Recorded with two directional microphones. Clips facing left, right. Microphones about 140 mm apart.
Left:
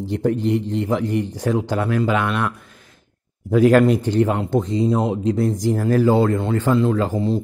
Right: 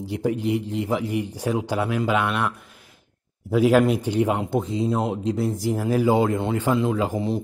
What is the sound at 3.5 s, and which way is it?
Speech, 5° right (ahead or behind).